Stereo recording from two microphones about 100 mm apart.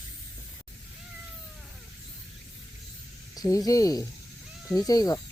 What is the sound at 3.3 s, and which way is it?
Speech, 35° left (ahead or behind).